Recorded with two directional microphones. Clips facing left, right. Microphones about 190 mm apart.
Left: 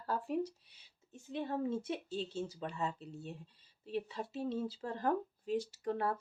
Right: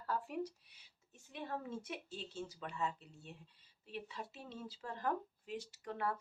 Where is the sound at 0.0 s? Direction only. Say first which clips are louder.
Left 4 dB; 30° left (ahead or behind).